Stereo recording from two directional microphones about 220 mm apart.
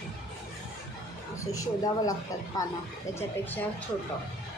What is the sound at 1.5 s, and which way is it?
A woman's voice, 15° left (ahead or behind).